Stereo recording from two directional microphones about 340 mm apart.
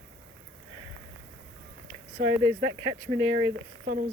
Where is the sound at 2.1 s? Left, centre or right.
Centre.